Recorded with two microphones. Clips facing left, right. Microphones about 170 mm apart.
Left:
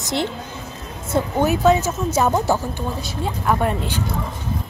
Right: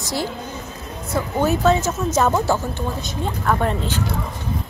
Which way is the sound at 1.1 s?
15° left (ahead or behind).